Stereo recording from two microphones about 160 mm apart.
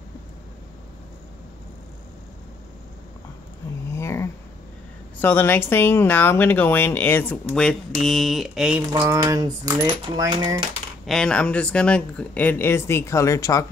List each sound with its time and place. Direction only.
3.9 s a sound: 15° left (ahead or behind)
5.2 s speech: 15° left (ahead or behind); by 10.6 s 25° right (ahead or behind)
11.1 s speech: 5° left (ahead or behind); by 13.7 s 20° left (ahead or behind)